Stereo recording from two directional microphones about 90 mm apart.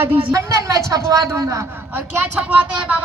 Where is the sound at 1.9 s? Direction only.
20° right (ahead or behind).